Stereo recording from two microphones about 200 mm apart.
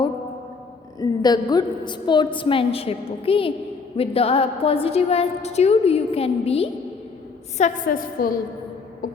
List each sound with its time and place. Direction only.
0.9 s a woman's voice: 20° left (ahead or behind)
7.6 s a woman's voice: 45° left (ahead or behind)